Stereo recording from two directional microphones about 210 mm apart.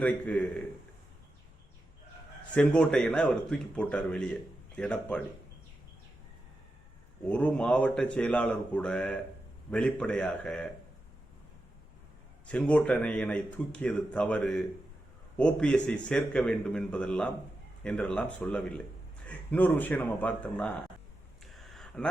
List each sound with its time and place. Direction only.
0.0 s speech: 5° left (ahead or behind)
2.5 s speech: 5° left (ahead or behind)
7.3 s speech: 5° left (ahead or behind)
12.5 s speech: 5° left (ahead or behind)
21.5 s a sound: centre (ahead or behind)